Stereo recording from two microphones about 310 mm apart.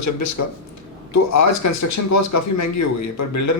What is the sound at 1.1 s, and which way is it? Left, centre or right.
A man's voice, left.